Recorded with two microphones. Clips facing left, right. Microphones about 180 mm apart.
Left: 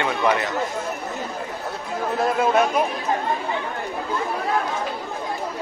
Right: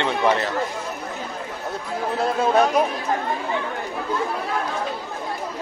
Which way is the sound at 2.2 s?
35° right (ahead or behind).